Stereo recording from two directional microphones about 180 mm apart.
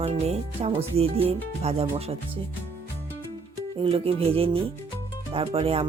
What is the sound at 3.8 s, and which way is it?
Speech, 30° right (ahead or behind).